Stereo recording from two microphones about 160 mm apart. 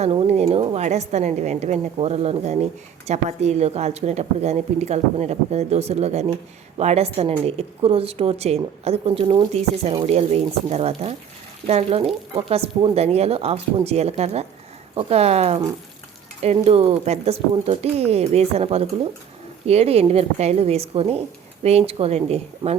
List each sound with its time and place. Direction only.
0.0 s a woman's voice: 40° right (ahead or behind)
16.6 s a woman's voice: 35° right (ahead or behind)